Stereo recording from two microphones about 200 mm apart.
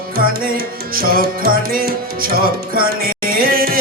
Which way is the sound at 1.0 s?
45° right (ahead or behind).